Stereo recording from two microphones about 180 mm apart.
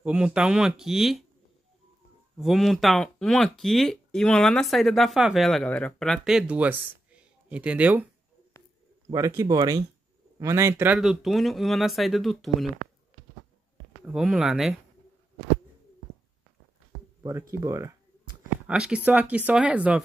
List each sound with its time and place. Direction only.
0.0 s speech: 5° right (ahead or behind)
2.3 s speech: centre (ahead or behind)
9.1 s speech: 15° right (ahead or behind); by 12.6 s centre (ahead or behind)
14.0 s speech: centre (ahead or behind)
17.2 s speech: 15° right (ahead or behind)
18.7 s speech: 5° right (ahead or behind)